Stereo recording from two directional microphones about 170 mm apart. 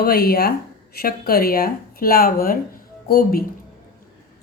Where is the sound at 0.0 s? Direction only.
65° left (ahead or behind).